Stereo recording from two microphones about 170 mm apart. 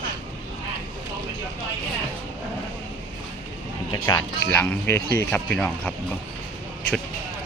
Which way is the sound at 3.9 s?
20° left (ahead or behind).